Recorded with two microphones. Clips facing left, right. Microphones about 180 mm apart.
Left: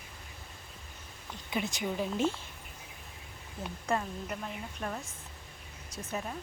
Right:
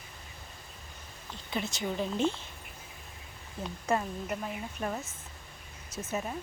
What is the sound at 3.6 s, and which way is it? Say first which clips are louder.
Speech: right 2 dB; 5° right (ahead or behind).